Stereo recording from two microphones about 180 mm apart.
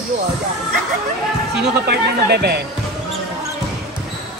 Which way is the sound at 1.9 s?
60° right (ahead or behind).